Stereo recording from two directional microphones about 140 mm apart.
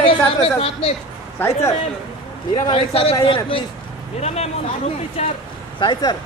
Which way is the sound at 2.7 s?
45° left (ahead or behind).